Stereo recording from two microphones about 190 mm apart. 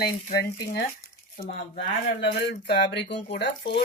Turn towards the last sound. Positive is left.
turn(degrees=65)  # may be behind; listen again after turning